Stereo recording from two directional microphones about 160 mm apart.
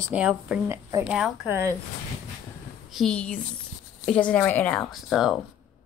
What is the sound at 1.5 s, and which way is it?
Speech, 20° right (ahead or behind).